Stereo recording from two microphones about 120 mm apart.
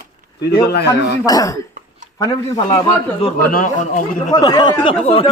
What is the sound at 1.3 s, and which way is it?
Speech, 35° left (ahead or behind).